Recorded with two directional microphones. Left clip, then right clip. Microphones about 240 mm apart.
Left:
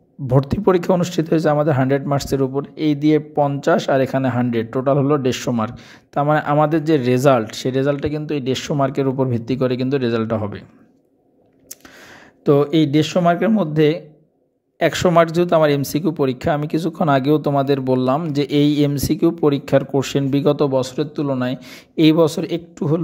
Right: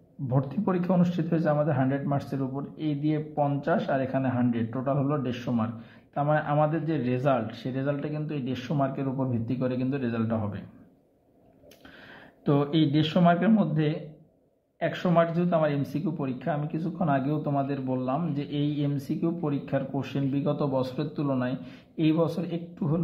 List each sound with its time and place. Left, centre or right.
0.3 s speech: left
12.4 s speech: left